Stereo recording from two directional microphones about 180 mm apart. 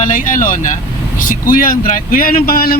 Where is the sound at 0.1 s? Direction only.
50° left (ahead or behind).